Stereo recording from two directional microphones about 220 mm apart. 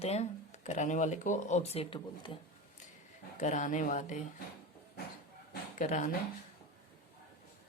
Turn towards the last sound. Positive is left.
turn(degrees=35)  # may be behind; listen again after turning